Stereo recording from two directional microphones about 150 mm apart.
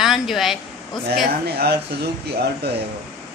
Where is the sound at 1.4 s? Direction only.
90° right.